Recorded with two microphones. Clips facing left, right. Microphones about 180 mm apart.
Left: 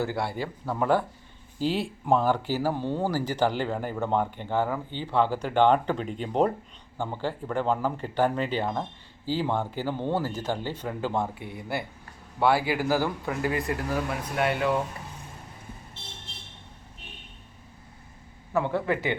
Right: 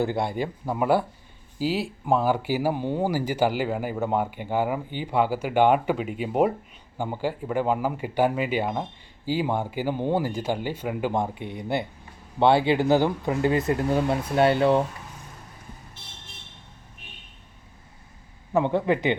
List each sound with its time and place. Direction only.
0.0 s speech: 20° right (ahead or behind)
16.0 s vehicle: 25° left (ahead or behind)
18.5 s speech: 20° right (ahead or behind)